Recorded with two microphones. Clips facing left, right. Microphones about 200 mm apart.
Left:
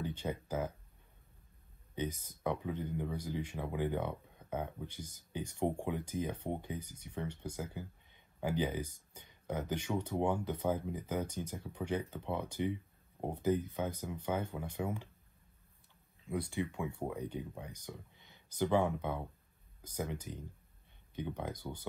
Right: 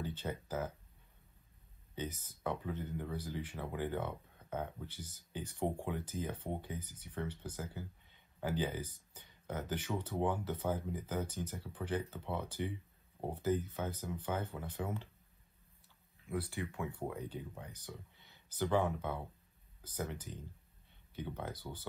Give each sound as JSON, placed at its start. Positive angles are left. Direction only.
{"t": 0.0, "sound": "speech", "side_deg": 15}
{"t": 2.0, "sound": "speech", "side_deg": 15}
{"t": 16.3, "sound": "speech", "side_deg": 15}